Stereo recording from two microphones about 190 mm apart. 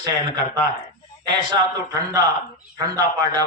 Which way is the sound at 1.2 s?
20° right (ahead or behind).